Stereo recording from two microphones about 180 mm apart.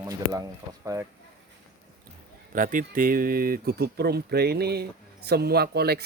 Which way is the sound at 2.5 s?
50° right (ahead or behind).